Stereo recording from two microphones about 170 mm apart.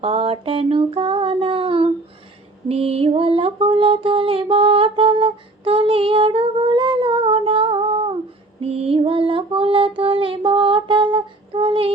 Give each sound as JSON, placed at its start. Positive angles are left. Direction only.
{"t": 0.0, "sound": "a sound", "side_deg": -35}
{"t": 2.6, "sound": "mantra", "side_deg": -35}
{"t": 10.0, "sound": "humming", "side_deg": -30}